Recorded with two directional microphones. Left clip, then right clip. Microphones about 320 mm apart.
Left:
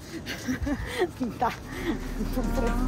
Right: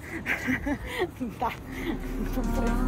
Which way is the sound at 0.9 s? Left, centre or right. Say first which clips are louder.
Left 2 dB; centre.